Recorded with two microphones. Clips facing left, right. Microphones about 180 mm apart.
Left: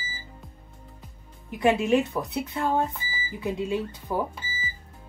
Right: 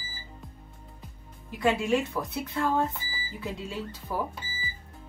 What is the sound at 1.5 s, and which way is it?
Speech, 20° left (ahead or behind).